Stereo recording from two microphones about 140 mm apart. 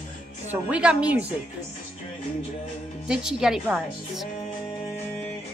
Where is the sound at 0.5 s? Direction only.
10° right (ahead or behind).